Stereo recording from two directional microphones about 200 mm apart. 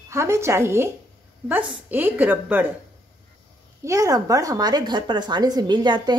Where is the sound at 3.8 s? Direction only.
15° right (ahead or behind).